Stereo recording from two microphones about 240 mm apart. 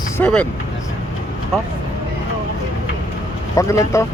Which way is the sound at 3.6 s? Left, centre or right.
Centre.